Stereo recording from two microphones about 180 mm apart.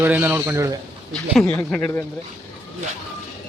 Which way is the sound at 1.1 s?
5° left (ahead or behind).